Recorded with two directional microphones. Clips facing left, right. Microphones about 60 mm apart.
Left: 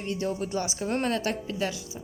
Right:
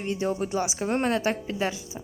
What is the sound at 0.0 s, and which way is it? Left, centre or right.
A woman's voice, right.